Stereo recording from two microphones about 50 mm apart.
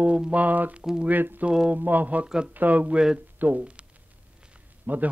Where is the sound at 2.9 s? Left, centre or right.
Centre.